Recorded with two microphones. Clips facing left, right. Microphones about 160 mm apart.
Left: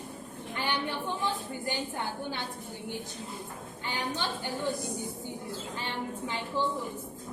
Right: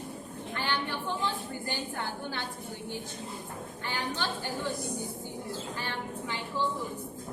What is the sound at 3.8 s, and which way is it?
Speech, 20° left (ahead or behind).